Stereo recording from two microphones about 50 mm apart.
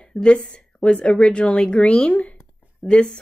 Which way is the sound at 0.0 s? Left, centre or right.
Left.